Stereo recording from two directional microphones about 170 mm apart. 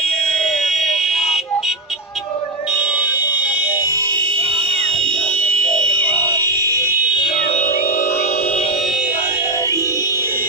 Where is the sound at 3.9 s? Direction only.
25° right (ahead or behind).